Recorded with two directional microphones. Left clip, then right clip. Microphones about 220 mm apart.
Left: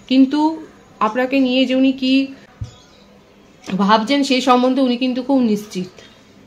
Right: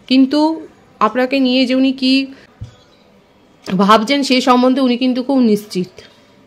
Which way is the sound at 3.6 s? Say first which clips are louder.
Right 4 dB; 45° right (ahead or behind).